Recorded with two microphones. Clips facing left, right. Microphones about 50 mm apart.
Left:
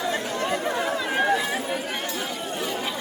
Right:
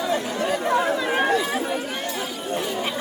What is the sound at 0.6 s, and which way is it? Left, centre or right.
Chatter, centre.